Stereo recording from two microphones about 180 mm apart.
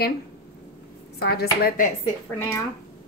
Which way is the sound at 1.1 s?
60° left (ahead or behind).